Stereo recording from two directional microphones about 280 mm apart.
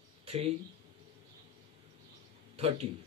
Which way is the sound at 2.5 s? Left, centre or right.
Right.